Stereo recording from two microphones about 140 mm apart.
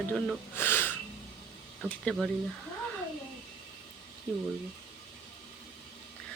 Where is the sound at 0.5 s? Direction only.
15° left (ahead or behind).